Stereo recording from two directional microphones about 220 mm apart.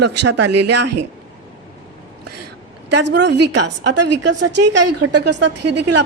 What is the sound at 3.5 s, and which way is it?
Speech, 90° right.